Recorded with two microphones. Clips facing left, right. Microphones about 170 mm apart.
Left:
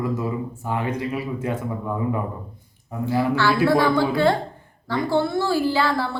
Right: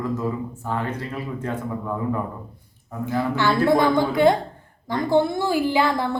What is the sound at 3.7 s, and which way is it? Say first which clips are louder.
A woman's voice: even; 20° right (ahead or behind).